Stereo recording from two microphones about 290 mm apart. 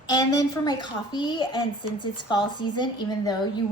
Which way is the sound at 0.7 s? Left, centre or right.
Centre.